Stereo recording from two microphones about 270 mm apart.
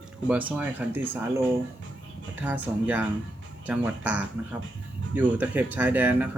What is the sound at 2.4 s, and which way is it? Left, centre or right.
Speech, centre.